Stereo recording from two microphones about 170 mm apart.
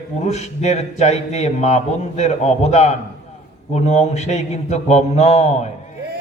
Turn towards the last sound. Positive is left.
turn(degrees=40)  # may be behind; listen again after turning